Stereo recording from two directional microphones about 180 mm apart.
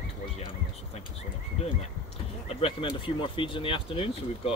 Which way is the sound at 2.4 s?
30° left (ahead or behind).